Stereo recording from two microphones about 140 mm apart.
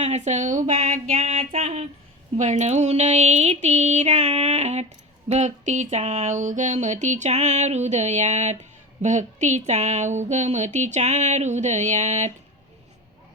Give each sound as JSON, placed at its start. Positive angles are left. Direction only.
{"t": 0.0, "sound": "speech", "side_deg": -55}
{"t": 1.1, "sound": "a sound", "side_deg": -45}
{"t": 2.4, "sound": "speech", "side_deg": -55}